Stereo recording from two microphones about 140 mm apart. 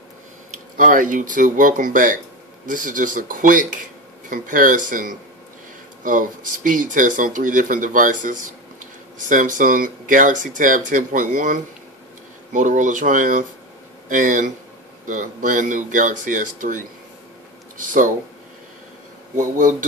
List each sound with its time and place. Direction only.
0.5 s speech: 70° right (ahead or behind)
19.3 s speech: 70° right (ahead or behind)